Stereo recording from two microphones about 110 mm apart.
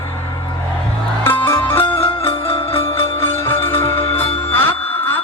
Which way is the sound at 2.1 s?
60° left (ahead or behind).